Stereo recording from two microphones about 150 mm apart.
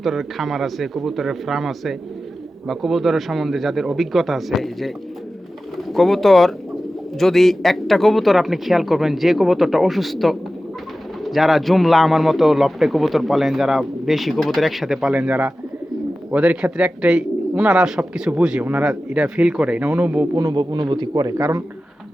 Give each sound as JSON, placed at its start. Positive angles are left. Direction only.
{"t": 0.0, "sound": "a man's voice", "side_deg": 0}
{"t": 20.3, "sound": "a man's voice", "side_deg": -25}